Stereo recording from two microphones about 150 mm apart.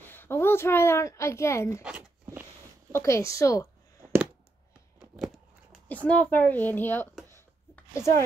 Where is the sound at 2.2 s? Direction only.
15° right (ahead or behind).